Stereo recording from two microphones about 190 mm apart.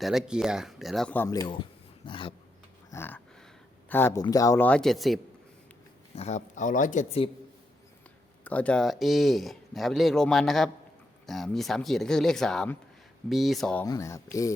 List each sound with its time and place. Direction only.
0.0 s speech: centre (ahead or behind); by 1.5 s 20° left (ahead or behind)
2.0 s a sound: 25° left (ahead or behind)
2.9 s a man's voice: 10° left (ahead or behind)
6.1 s speech: 35° left (ahead or behind)
8.4 s speech: 5° left (ahead or behind)
13.8 s a man's voice: 20° left (ahead or behind)